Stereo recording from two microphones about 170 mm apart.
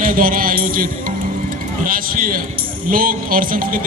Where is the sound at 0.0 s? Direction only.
55° right (ahead or behind).